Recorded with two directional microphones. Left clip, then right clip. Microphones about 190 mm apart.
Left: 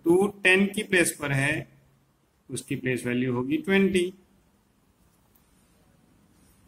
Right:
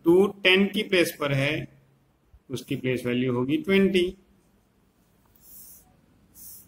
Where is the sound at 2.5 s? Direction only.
75° left (ahead or behind).